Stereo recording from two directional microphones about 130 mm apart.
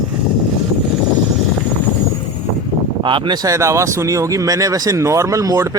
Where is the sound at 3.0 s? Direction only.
40° right (ahead or behind).